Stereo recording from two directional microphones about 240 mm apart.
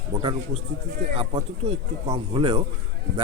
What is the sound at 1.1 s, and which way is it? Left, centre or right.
A man's voice, right.